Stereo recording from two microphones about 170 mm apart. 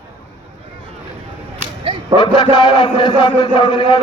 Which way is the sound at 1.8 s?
25° right (ahead or behind).